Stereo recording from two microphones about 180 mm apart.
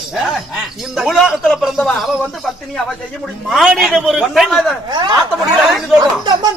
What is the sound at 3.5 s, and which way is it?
Speech, centre (ahead or behind).